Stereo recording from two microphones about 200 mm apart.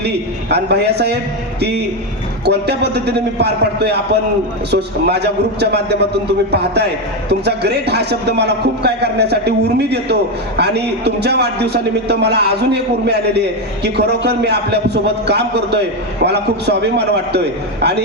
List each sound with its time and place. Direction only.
0.5 s a man's voice: 55° right (ahead or behind)
2.4 s a man's voice: 55° right (ahead or behind)